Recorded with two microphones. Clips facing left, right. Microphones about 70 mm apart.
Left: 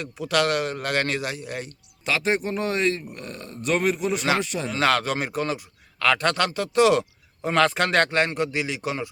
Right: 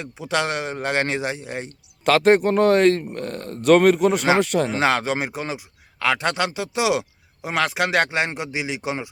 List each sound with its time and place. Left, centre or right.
0.0 s a man's voice: right
2.0 s speech: right
3.5 s a man's voice: right
4.7 s a man's voice: right